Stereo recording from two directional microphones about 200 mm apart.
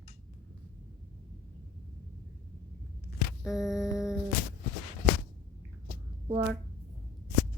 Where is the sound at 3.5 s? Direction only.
Centre (ahead or behind).